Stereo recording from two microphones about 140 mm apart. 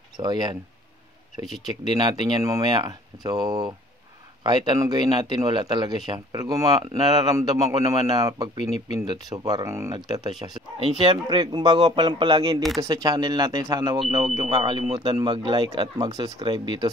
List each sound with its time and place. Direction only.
0.2 s speech: 30° right (ahead or behind)
1.4 s speech: centre (ahead or behind)
1.9 s speech: 30° right (ahead or behind)
10.8 s a man's voice: 40° right (ahead or behind)
14.6 s a man's voice: 40° right (ahead or behind)